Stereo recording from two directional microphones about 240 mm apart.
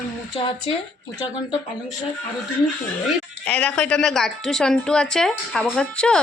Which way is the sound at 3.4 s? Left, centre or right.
Centre.